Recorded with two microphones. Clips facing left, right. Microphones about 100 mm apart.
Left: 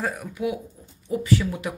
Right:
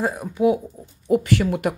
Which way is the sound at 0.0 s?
25° right (ahead or behind).